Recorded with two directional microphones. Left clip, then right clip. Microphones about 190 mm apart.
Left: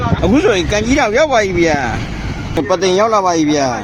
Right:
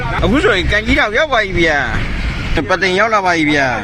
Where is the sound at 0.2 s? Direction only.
15° left (ahead or behind).